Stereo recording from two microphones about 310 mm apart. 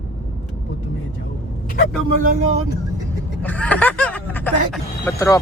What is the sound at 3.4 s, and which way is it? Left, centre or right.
Speech, centre.